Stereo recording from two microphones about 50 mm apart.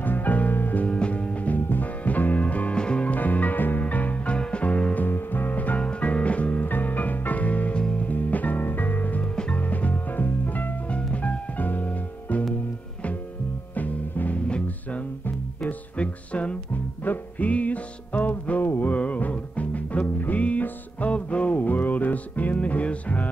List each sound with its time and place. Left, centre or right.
0.0 s music: left
0.8 s music: left
3.1 s music: left
5.0 s music: left
8.1 s music: left
9.3 s music: centre
9.6 s music: left
10.9 s music: left
13.7 s music: left